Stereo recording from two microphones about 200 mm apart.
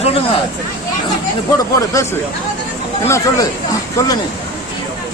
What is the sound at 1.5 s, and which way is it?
Speech, 15° left (ahead or behind).